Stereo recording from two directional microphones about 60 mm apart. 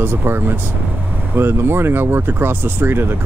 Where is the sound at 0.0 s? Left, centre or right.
Right.